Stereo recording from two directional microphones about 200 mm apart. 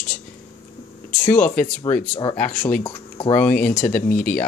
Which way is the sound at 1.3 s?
5° left (ahead or behind).